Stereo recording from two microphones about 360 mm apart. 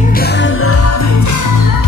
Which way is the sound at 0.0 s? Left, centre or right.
Left.